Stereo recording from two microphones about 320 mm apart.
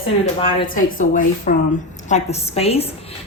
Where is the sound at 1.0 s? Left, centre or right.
Left.